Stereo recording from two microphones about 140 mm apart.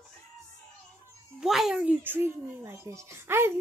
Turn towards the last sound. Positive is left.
turn(degrees=-15)  # may be behind; listen again after turning